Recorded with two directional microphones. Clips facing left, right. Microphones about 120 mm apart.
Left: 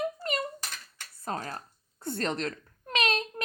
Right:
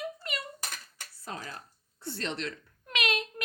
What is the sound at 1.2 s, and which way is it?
Speech, 45° left (ahead or behind).